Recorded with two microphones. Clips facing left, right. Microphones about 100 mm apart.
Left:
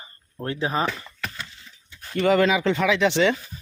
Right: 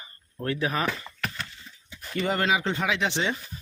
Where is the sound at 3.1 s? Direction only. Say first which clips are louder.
Left 8 dB; 90° left.